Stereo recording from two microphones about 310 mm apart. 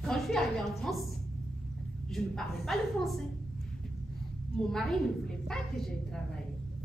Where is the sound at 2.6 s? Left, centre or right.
Centre.